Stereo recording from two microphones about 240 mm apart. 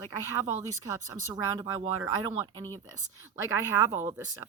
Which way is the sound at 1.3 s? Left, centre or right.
Centre.